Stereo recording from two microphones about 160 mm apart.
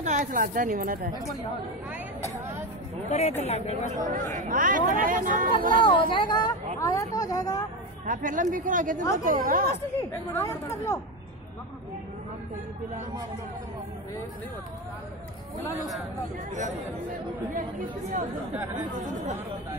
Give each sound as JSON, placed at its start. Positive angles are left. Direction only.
{"t": 0.0, "sound": "speech", "side_deg": -50}
{"t": 3.1, "sound": "a woman's voice", "side_deg": 45}
{"t": 3.9, "sound": "speech", "side_deg": -50}
{"t": 5.8, "sound": "speech", "side_deg": 30}
{"t": 8.1, "sound": "speech", "side_deg": -55}
{"t": 10.3, "sound": "speech", "side_deg": 15}
{"t": 16.5, "sound": "speech", "side_deg": -55}
{"t": 18.9, "sound": "speech", "side_deg": -50}